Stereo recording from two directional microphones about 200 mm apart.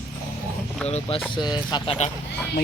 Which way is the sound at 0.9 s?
30° left (ahead or behind).